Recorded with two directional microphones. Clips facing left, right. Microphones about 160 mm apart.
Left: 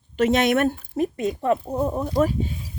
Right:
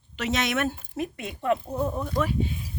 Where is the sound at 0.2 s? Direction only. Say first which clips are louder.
Left 8 dB; 50° left (ahead or behind).